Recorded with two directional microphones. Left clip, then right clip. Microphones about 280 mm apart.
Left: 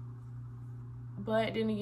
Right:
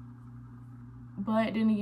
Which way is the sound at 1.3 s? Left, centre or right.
Centre.